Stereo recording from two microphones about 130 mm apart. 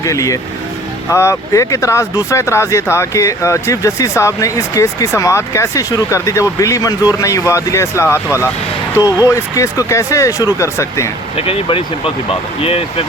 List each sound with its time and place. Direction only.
0.0 s speech: 25° left (ahead or behind)
11.3 s speech: 45° left (ahead or behind)